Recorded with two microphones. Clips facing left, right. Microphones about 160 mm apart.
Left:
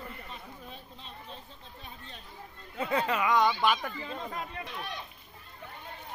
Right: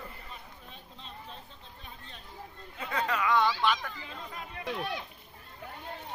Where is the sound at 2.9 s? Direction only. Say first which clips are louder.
Left 1 dB; 20° left (ahead or behind).